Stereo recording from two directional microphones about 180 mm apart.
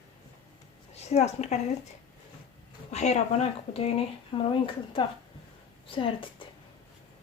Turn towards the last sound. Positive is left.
turn(degrees=30)  # may be behind; listen again after turning